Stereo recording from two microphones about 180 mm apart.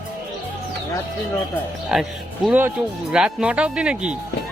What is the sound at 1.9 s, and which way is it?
Speech, centre (ahead or behind).